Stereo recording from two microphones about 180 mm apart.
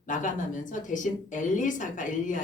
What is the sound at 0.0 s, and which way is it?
A woman's voice, 45° left (ahead or behind).